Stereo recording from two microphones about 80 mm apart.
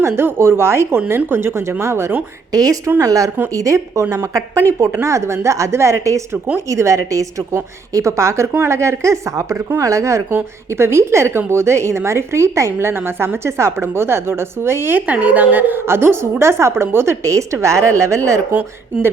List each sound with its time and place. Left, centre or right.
0.0 s a woman's voice: right
2.5 s a woman's voice: right